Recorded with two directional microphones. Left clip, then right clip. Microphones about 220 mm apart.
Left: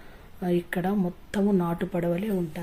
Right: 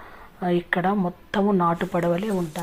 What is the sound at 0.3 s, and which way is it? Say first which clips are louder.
Speech: right 5 dB; 15° left (ahead or behind).